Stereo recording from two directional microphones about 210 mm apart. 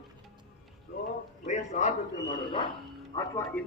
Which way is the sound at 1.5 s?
35° left (ahead or behind).